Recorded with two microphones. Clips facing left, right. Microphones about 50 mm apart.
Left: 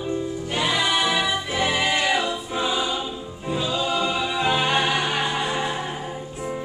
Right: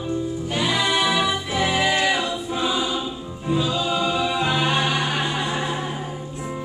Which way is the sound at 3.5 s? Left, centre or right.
Centre.